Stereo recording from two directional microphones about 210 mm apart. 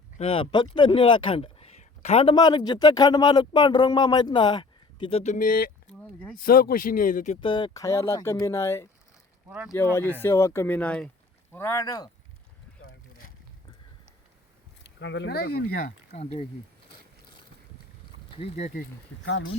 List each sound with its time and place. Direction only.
0.2 s speech: 25° left (ahead or behind); by 5.7 s 45° left (ahead or behind)
5.9 s speech: 5° left (ahead or behind)
6.3 s speech: 45° left (ahead or behind)
7.4 s speech: 20° left (ahead or behind)
9.5 s speech: 5° right (ahead or behind)
9.7 s speech: 10° left (ahead or behind)
14.9 s speech: 60° left (ahead or behind)
16.1 s speech: 30° left (ahead or behind)
18.3 s speech: 30° left (ahead or behind)